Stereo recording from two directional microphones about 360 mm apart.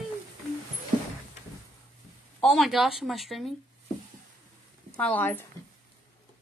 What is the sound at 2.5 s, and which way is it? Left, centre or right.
Speech, centre.